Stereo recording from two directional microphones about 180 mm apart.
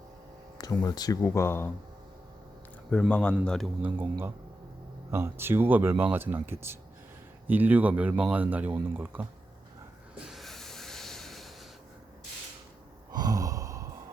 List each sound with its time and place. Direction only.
0.6 s speech: 20° left (ahead or behind)
2.9 s a man's voice: 5° left (ahead or behind)
3.8 s speech: 10° right (ahead or behind)
10.2 s a sound: centre (ahead or behind)
13.1 s sigh: 20° right (ahead or behind)